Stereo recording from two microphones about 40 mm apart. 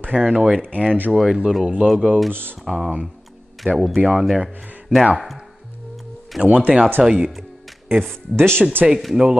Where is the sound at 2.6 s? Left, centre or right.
Centre.